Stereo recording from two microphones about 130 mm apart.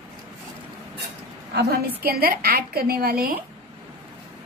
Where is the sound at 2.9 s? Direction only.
90° right.